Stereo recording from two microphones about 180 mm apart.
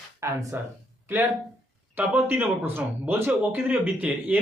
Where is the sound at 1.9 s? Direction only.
10° right (ahead or behind).